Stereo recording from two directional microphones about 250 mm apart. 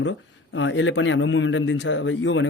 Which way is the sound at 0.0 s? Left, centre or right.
Left.